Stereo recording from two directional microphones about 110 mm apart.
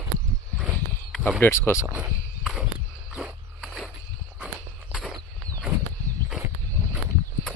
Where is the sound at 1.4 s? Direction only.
25° left (ahead or behind).